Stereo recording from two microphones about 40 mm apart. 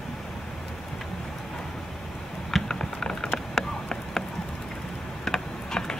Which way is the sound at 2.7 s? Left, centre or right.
Centre.